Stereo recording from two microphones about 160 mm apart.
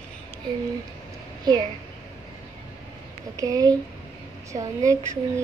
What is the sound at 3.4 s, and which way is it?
A child's voice, 25° right (ahead or behind).